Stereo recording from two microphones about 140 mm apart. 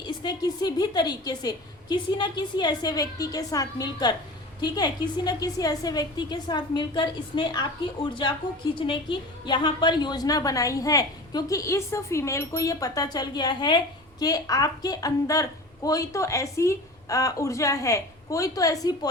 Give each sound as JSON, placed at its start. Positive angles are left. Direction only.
{"t": 0.2, "sound": "a woman's voice", "side_deg": 30}
{"t": 8.7, "sound": "a woman's voice", "side_deg": 35}